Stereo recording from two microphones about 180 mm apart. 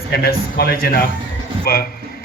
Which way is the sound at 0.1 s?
55° left (ahead or behind).